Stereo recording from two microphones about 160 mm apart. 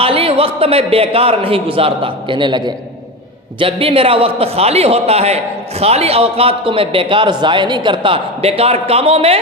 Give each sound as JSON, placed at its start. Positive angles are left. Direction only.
{"t": 0.0, "sound": "a man's voice", "side_deg": -35}